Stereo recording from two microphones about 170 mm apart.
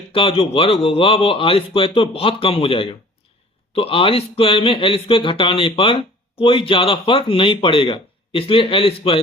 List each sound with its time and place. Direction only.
0.1 s speech: 30° left (ahead or behind)